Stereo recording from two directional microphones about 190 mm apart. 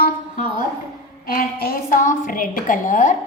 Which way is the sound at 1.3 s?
50° left (ahead or behind).